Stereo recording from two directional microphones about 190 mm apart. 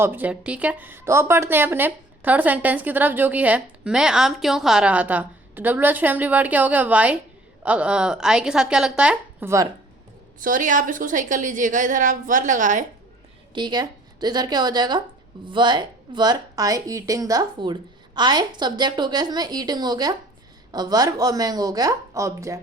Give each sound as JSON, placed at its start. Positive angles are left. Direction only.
{"t": 0.0, "sound": "a woman's voice", "side_deg": -10}
{"t": 10.4, "sound": "a woman's voice", "side_deg": -45}
{"t": 13.5, "sound": "speech", "side_deg": -25}